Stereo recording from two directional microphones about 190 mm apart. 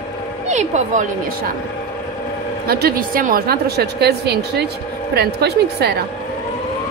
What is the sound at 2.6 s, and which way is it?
A woman's voice, 50° right (ahead or behind).